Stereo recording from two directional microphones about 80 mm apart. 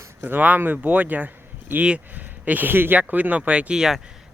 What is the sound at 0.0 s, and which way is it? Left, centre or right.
Speech, right.